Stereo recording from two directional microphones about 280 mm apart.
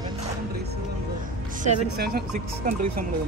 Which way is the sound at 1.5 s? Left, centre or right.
Right.